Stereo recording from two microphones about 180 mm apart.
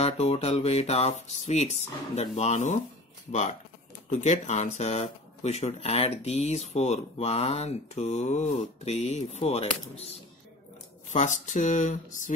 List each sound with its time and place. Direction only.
0.0 s speech: 35° left (ahead or behind)